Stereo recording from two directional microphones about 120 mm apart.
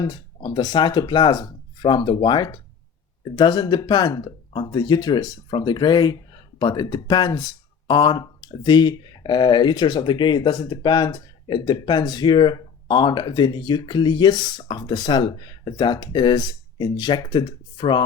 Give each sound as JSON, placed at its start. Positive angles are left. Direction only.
{"t": 0.0, "sound": "speech", "side_deg": 35}